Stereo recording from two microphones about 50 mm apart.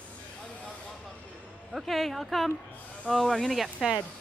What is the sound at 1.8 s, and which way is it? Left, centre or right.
Speech, centre.